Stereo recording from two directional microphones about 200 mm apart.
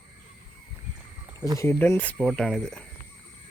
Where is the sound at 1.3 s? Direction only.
20° right (ahead or behind).